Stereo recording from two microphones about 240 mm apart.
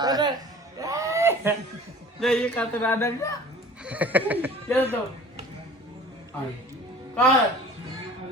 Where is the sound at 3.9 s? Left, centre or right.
Centre.